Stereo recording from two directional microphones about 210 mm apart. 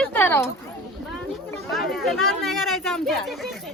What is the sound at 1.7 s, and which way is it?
A woman's voice, centre (ahead or behind).